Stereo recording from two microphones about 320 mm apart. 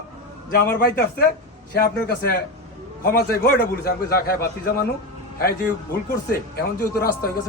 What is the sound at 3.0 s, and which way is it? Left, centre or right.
A man's voice, left.